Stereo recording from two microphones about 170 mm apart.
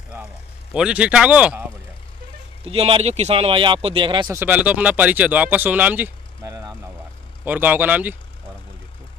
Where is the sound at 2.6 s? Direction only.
35° right (ahead or behind).